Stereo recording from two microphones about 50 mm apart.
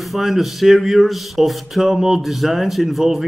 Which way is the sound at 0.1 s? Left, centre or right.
Centre.